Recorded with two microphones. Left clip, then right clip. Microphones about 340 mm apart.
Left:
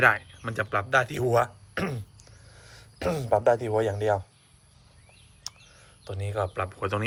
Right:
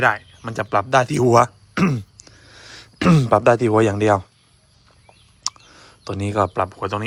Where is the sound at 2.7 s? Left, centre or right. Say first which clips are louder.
Right 10 dB; right.